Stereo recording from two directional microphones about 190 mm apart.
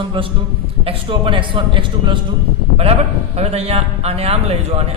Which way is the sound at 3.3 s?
35° right (ahead or behind).